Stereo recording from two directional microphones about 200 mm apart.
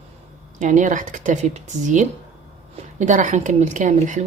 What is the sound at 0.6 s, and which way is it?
A woman's voice, 40° right (ahead or behind).